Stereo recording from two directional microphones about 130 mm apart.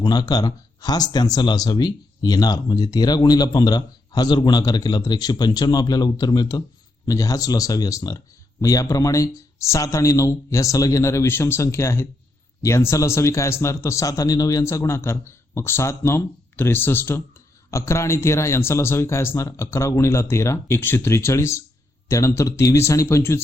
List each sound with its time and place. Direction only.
0.0 s a man's voice: 30° left (ahead or behind)